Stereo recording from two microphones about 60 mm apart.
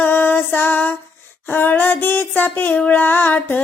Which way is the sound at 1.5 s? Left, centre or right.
Left.